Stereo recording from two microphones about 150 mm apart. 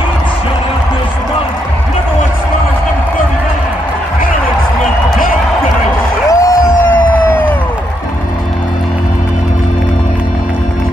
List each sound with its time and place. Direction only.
6.2 s crowd: 20° left (ahead or behind)